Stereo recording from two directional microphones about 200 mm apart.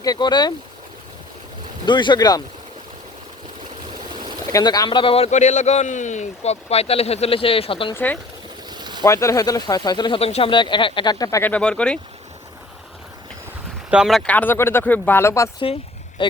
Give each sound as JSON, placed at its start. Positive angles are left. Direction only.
{"t": 0.0, "sound": "speech", "side_deg": 20}
{"t": 1.8, "sound": "speech", "side_deg": 25}
{"t": 4.5, "sound": "a man's voice", "side_deg": 20}
{"t": 7.9, "sound": "speech", "side_deg": 10}
{"t": 8.7, "sound": "boat", "side_deg": -20}
{"t": 9.0, "sound": "speech", "side_deg": 15}
{"t": 13.9, "sound": "speech", "side_deg": 0}
{"t": 15.6, "sound": "a sound", "side_deg": 30}